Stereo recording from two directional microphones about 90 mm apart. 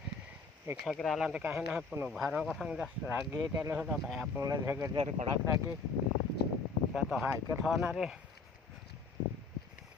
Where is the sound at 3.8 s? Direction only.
5° right (ahead or behind).